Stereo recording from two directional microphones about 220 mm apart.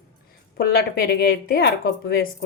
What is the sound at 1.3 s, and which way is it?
A woman's voice, 45° left (ahead or behind).